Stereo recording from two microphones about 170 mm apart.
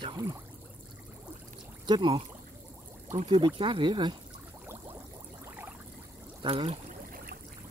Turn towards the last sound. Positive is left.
turn(degrees=-35)  # may be behind; listen again after turning